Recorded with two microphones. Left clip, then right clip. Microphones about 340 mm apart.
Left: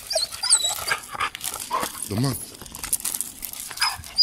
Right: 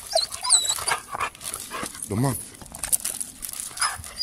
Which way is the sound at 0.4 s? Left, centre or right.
Centre.